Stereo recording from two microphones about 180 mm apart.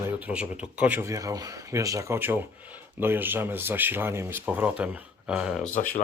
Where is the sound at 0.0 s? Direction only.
5° right (ahead or behind).